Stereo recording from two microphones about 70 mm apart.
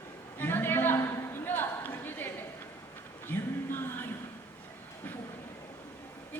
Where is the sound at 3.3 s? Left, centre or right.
Left.